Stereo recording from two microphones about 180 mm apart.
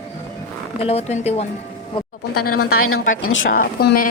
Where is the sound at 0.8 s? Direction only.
35° left (ahead or behind).